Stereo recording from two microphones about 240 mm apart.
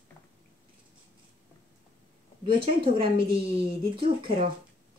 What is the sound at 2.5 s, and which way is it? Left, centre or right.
Speech, right.